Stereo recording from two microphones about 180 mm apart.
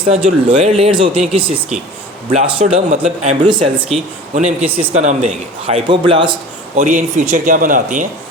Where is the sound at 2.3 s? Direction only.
35° right (ahead or behind).